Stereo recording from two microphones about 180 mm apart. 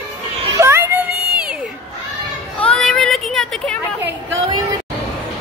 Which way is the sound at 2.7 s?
5° left (ahead or behind).